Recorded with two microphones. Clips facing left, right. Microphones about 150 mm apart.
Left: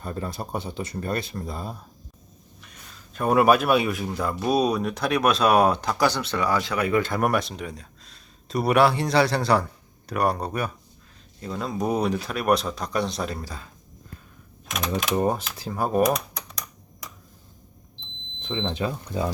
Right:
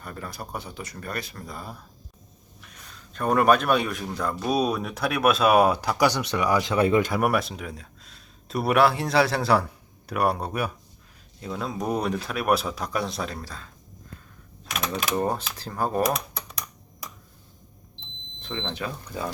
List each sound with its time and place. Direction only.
0.0 s speech: 25° left (ahead or behind)
2.6 s speech: centre (ahead or behind); by 6.7 s 15° right (ahead or behind)
6.7 s speech: 30° right (ahead or behind)
7.0 s speech: 5° right (ahead or behind)
14.7 s speech: 5° right (ahead or behind)
15.1 s speech: 10° left (ahead or behind)
18.7 s speech: 25° left (ahead or behind)